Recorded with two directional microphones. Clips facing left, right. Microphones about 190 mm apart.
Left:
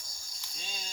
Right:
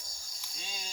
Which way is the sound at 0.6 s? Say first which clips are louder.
Even; 5° right (ahead or behind).